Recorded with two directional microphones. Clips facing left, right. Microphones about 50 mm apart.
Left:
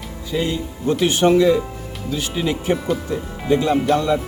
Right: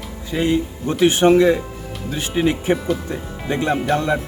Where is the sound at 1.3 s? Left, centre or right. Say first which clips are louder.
Even; right.